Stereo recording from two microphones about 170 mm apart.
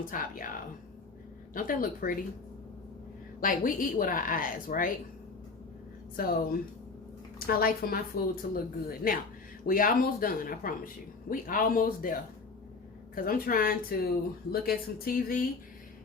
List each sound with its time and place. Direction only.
0.0 s a woman's voice: 55° left (ahead or behind)
1.5 s speech: 55° left (ahead or behind)
3.4 s a woman's voice: 50° left (ahead or behind)
6.1 s speech: 60° left (ahead or behind)